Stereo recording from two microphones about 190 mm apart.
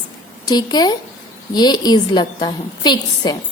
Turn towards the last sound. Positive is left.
turn(degrees=25)  # may be behind; listen again after turning